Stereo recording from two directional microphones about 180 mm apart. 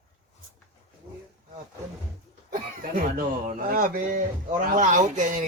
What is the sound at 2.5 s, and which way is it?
Speech, 50° right (ahead or behind).